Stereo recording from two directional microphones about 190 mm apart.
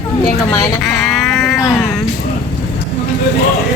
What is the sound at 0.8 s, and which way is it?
Sheep, centre (ahead or behind).